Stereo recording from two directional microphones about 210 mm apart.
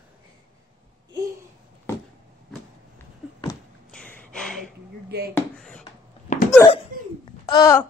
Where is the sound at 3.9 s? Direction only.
5° left (ahead or behind).